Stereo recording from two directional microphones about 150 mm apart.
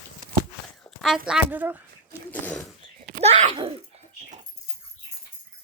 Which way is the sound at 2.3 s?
10° left (ahead or behind).